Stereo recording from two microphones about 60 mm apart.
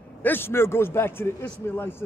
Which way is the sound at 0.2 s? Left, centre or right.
Left.